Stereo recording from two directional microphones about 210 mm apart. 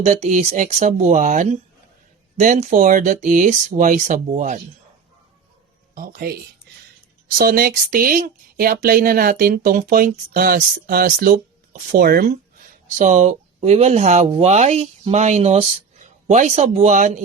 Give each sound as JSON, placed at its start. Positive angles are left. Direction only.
{"t": 0.0, "sound": "speech", "side_deg": -35}
{"t": 5.9, "sound": "speech", "side_deg": -45}